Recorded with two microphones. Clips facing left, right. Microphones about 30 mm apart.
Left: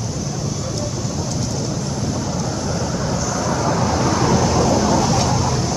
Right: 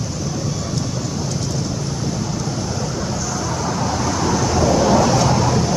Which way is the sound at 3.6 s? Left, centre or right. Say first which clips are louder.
Left 2 dB; centre.